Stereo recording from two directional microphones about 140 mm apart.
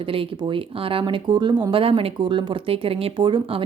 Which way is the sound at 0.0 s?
40° right (ahead or behind).